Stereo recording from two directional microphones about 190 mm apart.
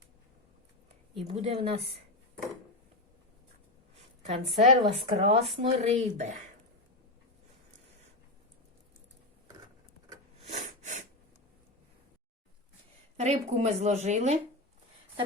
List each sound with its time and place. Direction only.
1.3 s speech: 30° right (ahead or behind)
4.3 s speech: 35° right (ahead or behind)
10.4 s snort: 40° right (ahead or behind)
13.1 s speech: 35° right (ahead or behind)